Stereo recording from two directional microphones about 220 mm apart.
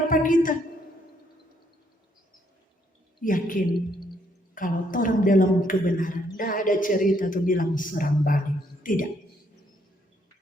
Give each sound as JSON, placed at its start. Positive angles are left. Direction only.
{"t": 0.1, "sound": "a woman's voice", "side_deg": 35}
{"t": 3.2, "sound": "a woman's voice", "side_deg": 40}